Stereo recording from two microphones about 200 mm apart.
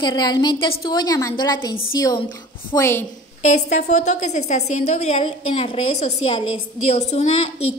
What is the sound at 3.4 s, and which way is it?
A woman's voice, 35° left (ahead or behind).